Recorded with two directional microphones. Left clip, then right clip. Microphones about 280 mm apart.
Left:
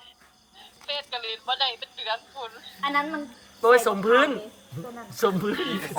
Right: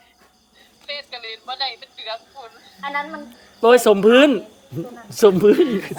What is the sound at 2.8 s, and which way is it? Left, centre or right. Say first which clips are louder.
Speech: even; left.